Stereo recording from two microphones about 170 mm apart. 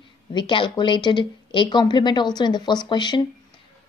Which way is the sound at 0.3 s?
30° left (ahead or behind).